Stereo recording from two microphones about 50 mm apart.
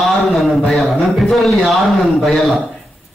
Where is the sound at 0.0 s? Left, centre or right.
Centre.